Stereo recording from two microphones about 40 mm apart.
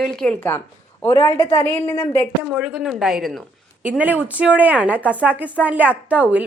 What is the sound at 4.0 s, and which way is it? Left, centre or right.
A woman's voice, right.